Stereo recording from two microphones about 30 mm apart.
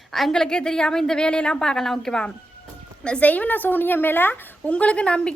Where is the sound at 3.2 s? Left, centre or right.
Left.